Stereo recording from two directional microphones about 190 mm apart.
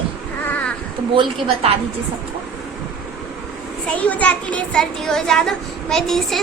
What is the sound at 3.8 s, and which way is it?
A child's voice, 5° left (ahead or behind).